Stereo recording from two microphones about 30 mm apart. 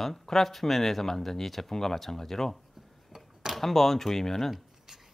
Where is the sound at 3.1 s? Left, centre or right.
Centre.